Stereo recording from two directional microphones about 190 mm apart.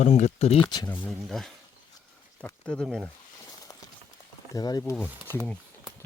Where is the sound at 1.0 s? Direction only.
Centre (ahead or behind).